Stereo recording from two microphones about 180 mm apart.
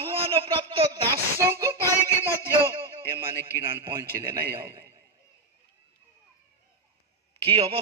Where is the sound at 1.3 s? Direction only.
15° right (ahead or behind).